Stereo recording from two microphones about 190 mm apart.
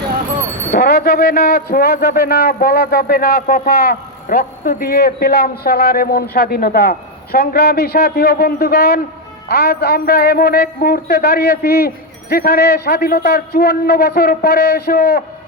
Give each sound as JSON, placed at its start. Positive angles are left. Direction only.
{"t": 0.7, "sound": "a man's voice", "side_deg": 55}